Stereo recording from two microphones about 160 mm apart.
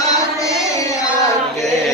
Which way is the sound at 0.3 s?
20° left (ahead or behind).